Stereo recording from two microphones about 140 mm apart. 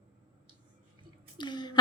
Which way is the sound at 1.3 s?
30° left (ahead or behind).